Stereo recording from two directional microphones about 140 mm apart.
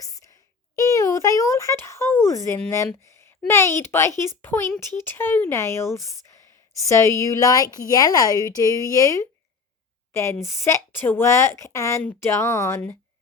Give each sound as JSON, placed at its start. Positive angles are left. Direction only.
{"t": 0.8, "sound": "a child's voice", "side_deg": 20}